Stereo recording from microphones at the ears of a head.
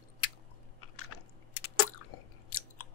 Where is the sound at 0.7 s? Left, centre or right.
Left.